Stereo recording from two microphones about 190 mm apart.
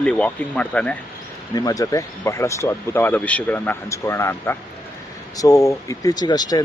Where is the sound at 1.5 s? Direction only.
20° left (ahead or behind).